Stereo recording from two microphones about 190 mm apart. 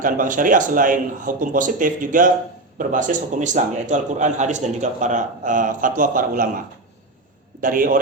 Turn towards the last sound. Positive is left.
turn(degrees=-45)  # may be behind; listen again after turning